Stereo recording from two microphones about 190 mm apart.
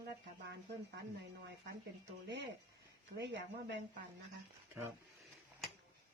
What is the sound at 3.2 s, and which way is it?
Speech, 65° right (ahead or behind).